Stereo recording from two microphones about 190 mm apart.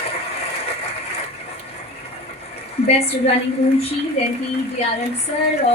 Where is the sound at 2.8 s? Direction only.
30° left (ahead or behind).